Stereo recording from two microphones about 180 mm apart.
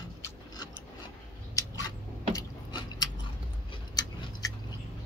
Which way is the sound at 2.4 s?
25° left (ahead or behind).